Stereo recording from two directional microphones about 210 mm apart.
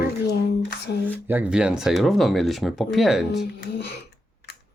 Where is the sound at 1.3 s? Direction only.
5° right (ahead or behind).